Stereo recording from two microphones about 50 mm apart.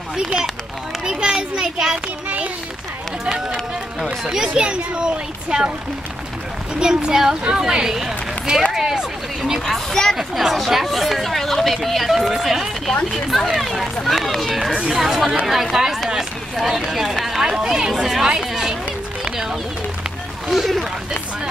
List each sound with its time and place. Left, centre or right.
1.0 s children playing: centre
2.2 s a sound: right
3.3 s speech: centre
6.7 s speech: centre
9.8 s speech: centre
10.1 s speech: centre
14.7 s speech: right
15.0 s speech: centre
17.1 s a sound: centre
17.4 s speech: centre
19.3 s a sound: centre